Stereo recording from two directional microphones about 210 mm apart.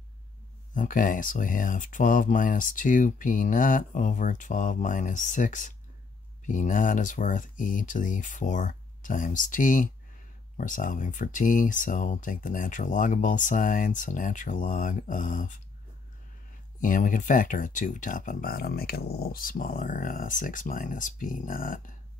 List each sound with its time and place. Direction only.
0.7 s speech: 40° left (ahead or behind)
16.8 s speech: 40° left (ahead or behind)